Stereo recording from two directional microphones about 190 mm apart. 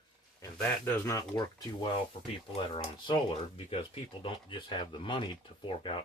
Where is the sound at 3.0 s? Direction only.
30° left (ahead or behind).